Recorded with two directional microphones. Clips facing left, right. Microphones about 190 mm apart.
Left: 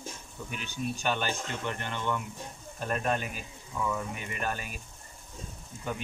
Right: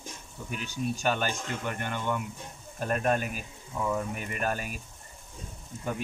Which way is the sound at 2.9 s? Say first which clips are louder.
Right 3 dB; 45° right (ahead or behind).